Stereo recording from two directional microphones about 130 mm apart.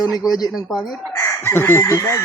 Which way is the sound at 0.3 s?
30° left (ahead or behind).